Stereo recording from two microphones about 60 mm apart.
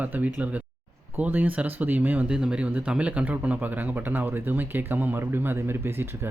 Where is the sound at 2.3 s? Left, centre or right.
Centre.